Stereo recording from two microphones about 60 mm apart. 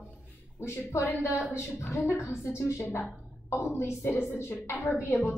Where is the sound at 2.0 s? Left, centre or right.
Left.